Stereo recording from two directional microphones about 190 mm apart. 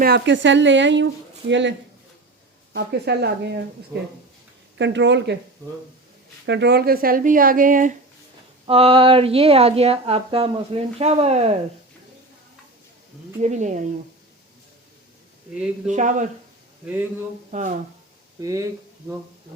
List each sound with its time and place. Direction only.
0.0 s speech: 65° right (ahead or behind)
2.7 s speech: 60° right (ahead or behind)
4.8 s speech: 70° right (ahead or behind)
6.4 s speech: 65° right (ahead or behind); by 7.9 s 45° right (ahead or behind)
8.6 s speech: 30° right (ahead or behind)
13.4 s speech: 40° right (ahead or behind)
15.9 s speech: 40° right (ahead or behind)
16.8 s speech: 5° right (ahead or behind)
17.5 s speech: 40° right (ahead or behind)
18.3 s speech: 15° right (ahead or behind)